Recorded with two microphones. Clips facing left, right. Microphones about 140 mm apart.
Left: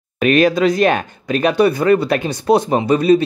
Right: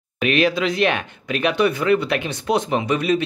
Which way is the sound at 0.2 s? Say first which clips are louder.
Left 6 dB; 45° left (ahead or behind).